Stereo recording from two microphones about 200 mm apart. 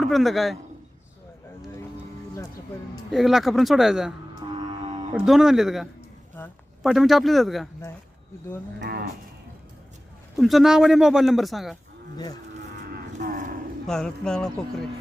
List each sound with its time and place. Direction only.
0.0 s a man's voice: centre (ahead or behind)
3.1 s a man's voice: centre (ahead or behind)
4.4 s music: 25° right (ahead or behind)
5.1 s a man's voice: centre (ahead or behind)
6.4 s speech: 10° left (ahead or behind)
6.8 s a man's voice: centre (ahead or behind)
8.8 s moo: 50° right (ahead or behind)
10.3 s a man's voice: centre (ahead or behind)
12.1 s livestock: 20° left (ahead or behind)
13.1 s a sound: 40° right (ahead or behind)
13.8 s a man's voice: 5° left (ahead or behind)